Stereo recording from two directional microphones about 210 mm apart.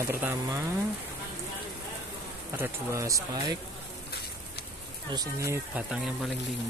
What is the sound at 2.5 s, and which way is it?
Speech, 15° right (ahead or behind).